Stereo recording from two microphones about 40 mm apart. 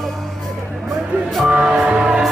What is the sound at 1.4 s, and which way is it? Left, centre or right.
Music, right.